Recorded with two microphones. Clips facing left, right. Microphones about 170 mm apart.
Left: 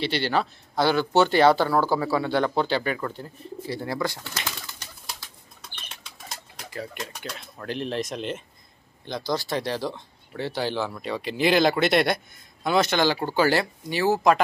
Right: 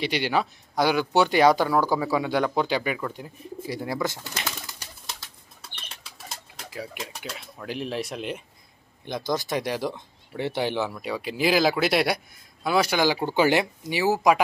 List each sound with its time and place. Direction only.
0.0 s speech: 10° right (ahead or behind)
6.2 s speech: 5° right (ahead or behind)
10.9 s speech: 5° right (ahead or behind)